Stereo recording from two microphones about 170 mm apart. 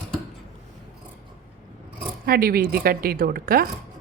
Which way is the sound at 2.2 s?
60° right (ahead or behind).